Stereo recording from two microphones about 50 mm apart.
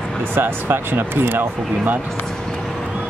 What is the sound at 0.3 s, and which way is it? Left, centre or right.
Speech, right.